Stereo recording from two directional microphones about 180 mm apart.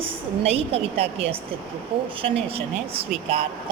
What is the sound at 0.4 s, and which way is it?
Speech, 35° right (ahead or behind).